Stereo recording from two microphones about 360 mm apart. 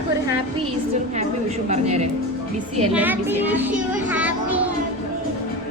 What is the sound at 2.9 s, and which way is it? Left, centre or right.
Speech, centre.